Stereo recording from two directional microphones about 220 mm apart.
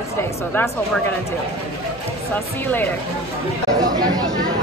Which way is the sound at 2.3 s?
10° left (ahead or behind).